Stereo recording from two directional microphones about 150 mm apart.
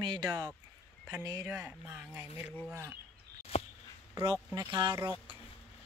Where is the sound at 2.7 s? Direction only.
15° right (ahead or behind).